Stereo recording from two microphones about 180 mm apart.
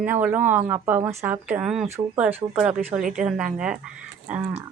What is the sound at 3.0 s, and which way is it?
Speech, 45° right (ahead or behind).